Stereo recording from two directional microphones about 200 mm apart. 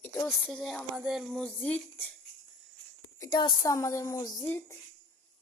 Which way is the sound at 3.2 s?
20° left (ahead or behind).